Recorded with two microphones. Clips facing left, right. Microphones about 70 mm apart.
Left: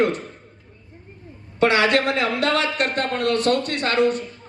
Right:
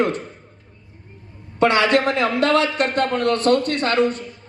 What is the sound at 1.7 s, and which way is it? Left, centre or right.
A man's voice, right.